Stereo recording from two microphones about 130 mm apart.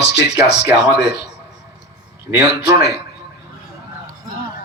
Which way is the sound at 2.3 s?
25° right (ahead or behind).